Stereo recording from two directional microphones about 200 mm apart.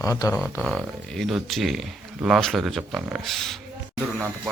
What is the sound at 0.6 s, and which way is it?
Speech, centre (ahead or behind).